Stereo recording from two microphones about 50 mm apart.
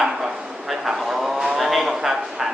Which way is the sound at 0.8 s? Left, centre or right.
Centre.